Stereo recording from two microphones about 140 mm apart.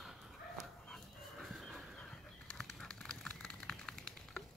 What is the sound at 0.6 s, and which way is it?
Dog, centre (ahead or behind).